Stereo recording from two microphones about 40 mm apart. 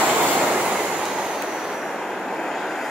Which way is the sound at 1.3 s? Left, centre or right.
Centre.